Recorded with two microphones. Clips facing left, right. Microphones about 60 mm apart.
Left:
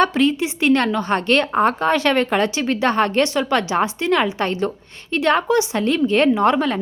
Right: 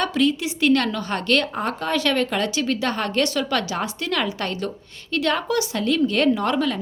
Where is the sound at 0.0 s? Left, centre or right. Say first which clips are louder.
Left 4 dB; left.